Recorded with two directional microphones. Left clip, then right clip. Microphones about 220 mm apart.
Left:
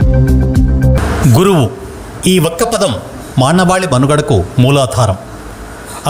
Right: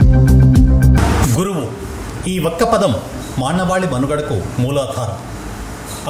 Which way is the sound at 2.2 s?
45° left (ahead or behind).